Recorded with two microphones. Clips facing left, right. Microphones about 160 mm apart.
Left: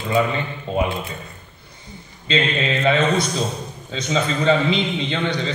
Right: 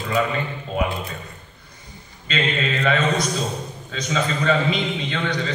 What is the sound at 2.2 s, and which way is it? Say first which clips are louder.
A man's voice: left 3 dB; 25° left (ahead or behind).